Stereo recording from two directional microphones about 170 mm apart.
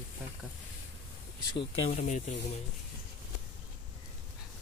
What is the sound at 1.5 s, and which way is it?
Speech, 40° left (ahead or behind).